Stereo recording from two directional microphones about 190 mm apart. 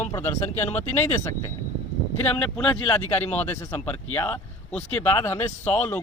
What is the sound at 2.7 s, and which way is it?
Speech, 10° left (ahead or behind).